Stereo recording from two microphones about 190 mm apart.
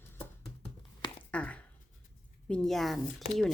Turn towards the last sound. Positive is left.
turn(degrees=0)  # may be behind; listen again after turning